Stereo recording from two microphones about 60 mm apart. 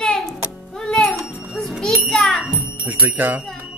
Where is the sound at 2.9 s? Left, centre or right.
Right.